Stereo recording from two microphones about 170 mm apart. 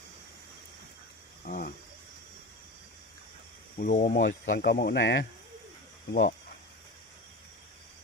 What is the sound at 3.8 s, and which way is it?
Speech, 50° left (ahead or behind).